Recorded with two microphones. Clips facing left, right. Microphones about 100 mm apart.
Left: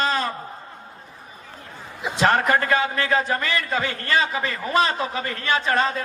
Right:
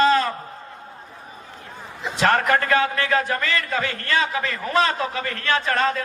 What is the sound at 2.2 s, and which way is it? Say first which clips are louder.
A man's voice: even; 15° left (ahead or behind).